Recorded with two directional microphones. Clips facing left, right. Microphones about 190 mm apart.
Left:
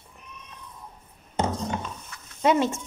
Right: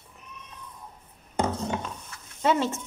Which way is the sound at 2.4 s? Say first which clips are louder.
Left 3 dB; 15° left (ahead or behind).